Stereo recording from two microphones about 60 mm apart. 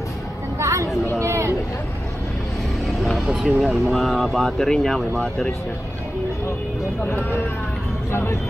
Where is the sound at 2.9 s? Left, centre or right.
Centre.